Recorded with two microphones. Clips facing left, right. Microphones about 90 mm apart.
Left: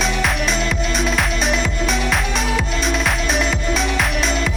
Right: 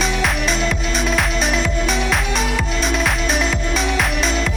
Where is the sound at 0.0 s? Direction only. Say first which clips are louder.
Even; centre (ahead or behind).